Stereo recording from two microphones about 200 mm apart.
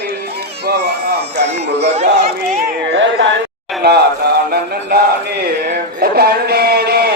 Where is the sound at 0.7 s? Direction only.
55° right (ahead or behind).